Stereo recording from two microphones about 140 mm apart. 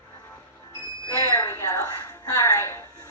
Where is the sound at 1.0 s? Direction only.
25° left (ahead or behind).